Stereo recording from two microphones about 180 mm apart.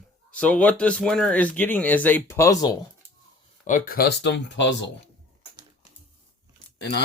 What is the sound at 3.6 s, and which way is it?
Speech, 45° left (ahead or behind).